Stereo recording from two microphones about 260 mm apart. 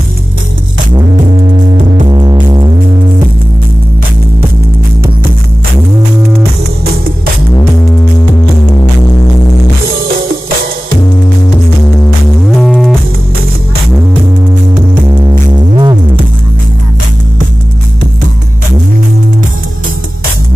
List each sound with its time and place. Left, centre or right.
2.0 s music: centre
12.4 s music: centre
15.0 s music: centre